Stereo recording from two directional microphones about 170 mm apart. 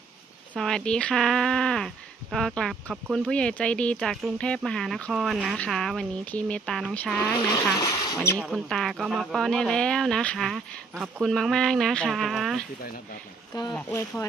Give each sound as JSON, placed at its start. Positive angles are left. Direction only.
{"t": 0.6, "sound": "speech", "side_deg": 5}
{"t": 7.3, "sound": "speech", "side_deg": 25}
{"t": 8.2, "sound": "speech", "side_deg": -5}
{"t": 13.7, "sound": "speech", "side_deg": 10}